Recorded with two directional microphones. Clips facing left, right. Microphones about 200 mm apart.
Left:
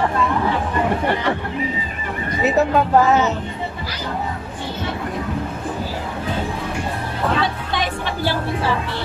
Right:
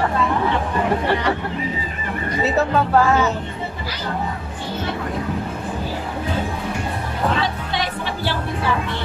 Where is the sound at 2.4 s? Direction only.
15° left (ahead or behind).